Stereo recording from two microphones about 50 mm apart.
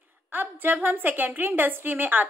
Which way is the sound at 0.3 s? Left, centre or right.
Right.